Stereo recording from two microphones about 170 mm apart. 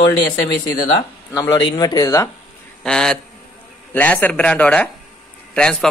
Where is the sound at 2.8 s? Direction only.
5° left (ahead or behind).